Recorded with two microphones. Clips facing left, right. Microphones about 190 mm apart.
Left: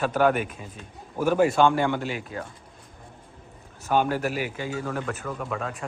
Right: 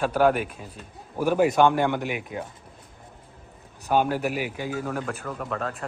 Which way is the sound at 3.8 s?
10° right (ahead or behind).